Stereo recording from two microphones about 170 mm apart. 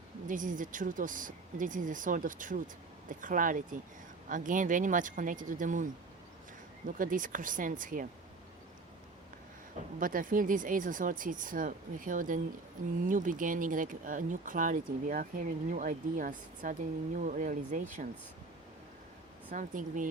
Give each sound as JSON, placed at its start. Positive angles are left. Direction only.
{"t": 0.3, "sound": "speech", "side_deg": -50}
{"t": 10.0, "sound": "speech", "side_deg": -55}
{"t": 19.5, "sound": "speech", "side_deg": -50}